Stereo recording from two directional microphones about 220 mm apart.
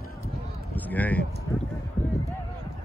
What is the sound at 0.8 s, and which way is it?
Speech, 5° left (ahead or behind).